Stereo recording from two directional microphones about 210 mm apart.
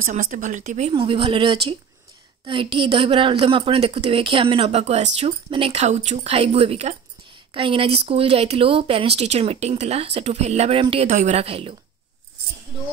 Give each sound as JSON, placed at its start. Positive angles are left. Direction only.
{"t": 0.0, "sound": "a woman's voice", "side_deg": -35}